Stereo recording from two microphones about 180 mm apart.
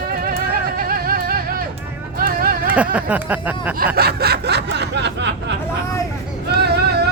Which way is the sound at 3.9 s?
60° right (ahead or behind).